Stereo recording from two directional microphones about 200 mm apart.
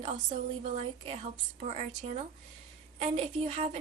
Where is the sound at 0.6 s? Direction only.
30° right (ahead or behind).